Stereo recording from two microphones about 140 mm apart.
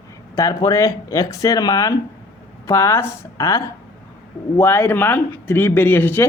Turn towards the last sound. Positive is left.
turn(degrees=15)  # may be behind; listen again after turning